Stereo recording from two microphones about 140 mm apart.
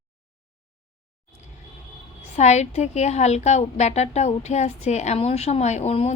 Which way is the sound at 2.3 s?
55° left (ahead or behind).